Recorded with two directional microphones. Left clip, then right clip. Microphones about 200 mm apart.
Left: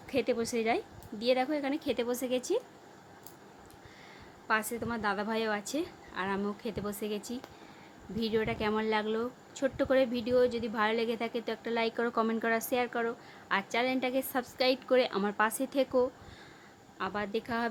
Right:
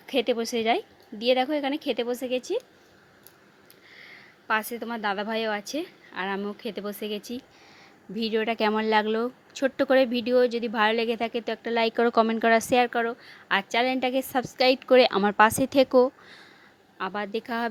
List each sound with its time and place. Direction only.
0.1 s a woman's voice: 30° right (ahead or behind); by 2.6 s 15° right (ahead or behind)
4.0 s a woman's voice: 25° right (ahead or behind)